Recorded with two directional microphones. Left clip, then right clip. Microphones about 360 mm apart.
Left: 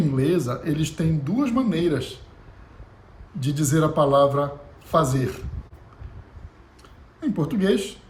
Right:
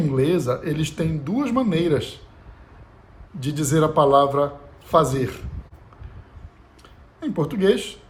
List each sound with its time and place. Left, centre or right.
0.0 s speech: centre
3.4 s speech: centre
7.2 s speech: centre